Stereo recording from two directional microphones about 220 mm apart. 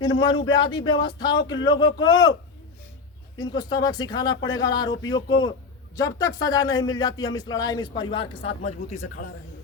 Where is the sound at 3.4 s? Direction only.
20° left (ahead or behind); by 9.3 s 35° left (ahead or behind).